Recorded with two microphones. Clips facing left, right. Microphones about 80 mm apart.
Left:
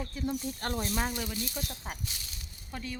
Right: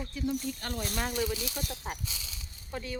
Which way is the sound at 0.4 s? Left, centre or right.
Left.